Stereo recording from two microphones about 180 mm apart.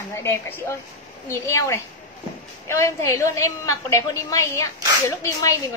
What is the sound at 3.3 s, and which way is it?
A woman's voice, 15° left (ahead or behind).